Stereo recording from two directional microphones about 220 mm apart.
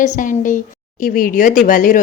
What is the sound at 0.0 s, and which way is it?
A woman's voice, 35° left (ahead or behind).